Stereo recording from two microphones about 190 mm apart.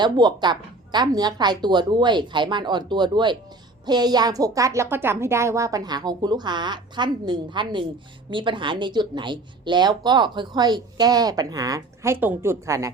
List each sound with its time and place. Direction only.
0.0 s a woman's voice: 20° right (ahead or behind)